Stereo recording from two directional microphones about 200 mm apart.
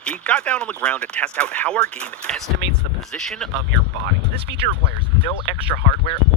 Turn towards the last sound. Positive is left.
turn(degrees=30)  # may be behind; listen again after turning